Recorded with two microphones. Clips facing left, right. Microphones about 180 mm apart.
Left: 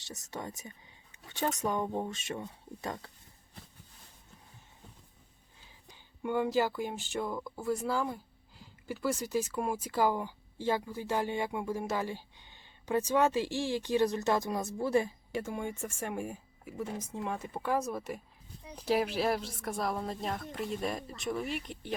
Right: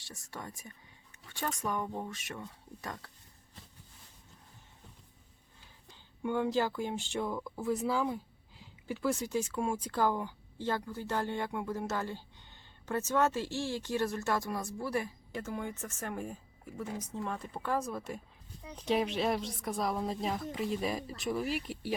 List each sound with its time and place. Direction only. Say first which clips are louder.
0.0 s speech: left 4 dB; 20° left (ahead or behind)
5.9 s speech: left 1 dB; 10° left (ahead or behind)